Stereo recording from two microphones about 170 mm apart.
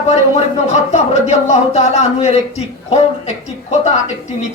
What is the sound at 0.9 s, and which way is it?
Speech, 40° left (ahead or behind).